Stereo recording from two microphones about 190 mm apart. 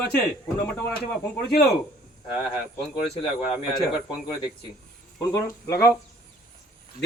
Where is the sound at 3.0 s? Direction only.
30° left (ahead or behind).